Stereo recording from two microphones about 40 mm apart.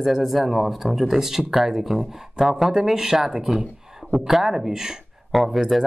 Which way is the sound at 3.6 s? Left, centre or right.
Centre.